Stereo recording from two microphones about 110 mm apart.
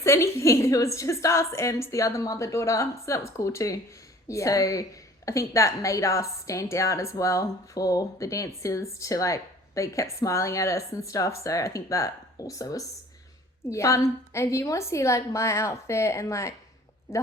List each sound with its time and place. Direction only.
0.0 s a woman's voice: 25° left (ahead or behind)